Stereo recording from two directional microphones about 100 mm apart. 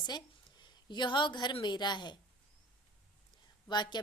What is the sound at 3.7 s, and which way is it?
Speech, 45° left (ahead or behind).